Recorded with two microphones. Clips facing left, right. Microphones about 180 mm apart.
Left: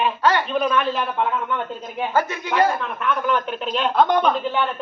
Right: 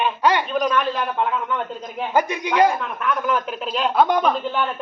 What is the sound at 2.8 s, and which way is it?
Speech, centre (ahead or behind).